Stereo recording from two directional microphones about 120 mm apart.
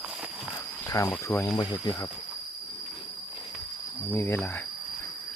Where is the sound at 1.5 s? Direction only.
35° left (ahead or behind).